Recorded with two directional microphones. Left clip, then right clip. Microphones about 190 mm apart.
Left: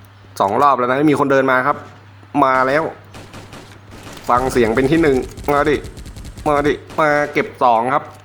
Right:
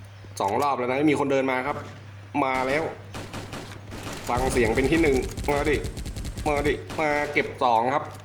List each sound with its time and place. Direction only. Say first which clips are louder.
0.5 s speech: left 11 dB; 15° left (ahead or behind)
2.3 s fusillade: left 10 dB; centre (ahead or behind)
4.9 s speech: left 7 dB; centre (ahead or behind)
7.6 s speech: left 8 dB; 15° left (ahead or behind)